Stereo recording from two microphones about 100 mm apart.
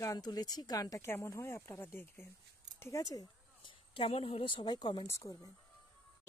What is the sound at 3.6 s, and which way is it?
A woman's voice, 65° left (ahead or behind).